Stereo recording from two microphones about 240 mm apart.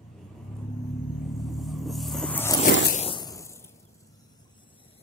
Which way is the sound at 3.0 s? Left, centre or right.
Centre.